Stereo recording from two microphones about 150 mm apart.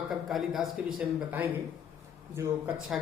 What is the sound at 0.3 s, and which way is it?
Speech, centre (ahead or behind).